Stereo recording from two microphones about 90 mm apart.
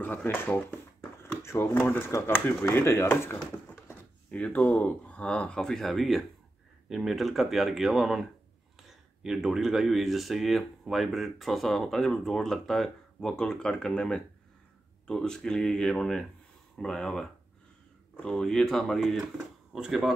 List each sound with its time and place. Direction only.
0.0 s speech: 20° left (ahead or behind)
1.2 s a sound: 25° left (ahead or behind)
1.9 s speech: 30° left (ahead or behind); by 20.1 s 5° right (ahead or behind)